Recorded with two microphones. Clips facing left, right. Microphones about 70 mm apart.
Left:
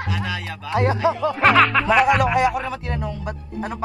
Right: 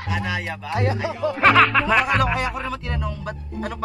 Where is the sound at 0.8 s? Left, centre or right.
Left.